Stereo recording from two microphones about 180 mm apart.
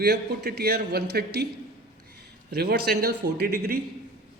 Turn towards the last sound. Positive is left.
turn(degrees=-60)  # may be behind; listen again after turning